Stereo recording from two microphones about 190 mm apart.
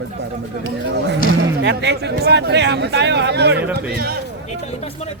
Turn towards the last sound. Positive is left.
turn(degrees=-55)  # may be behind; listen again after turning